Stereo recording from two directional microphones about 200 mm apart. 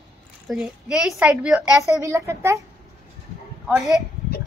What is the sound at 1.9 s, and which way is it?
Speech, 15° right (ahead or behind).